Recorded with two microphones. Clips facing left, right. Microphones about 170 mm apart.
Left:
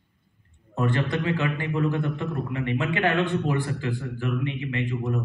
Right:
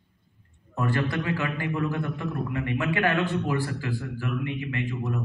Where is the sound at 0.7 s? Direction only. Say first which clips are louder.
Left 2 dB; 25° left (ahead or behind).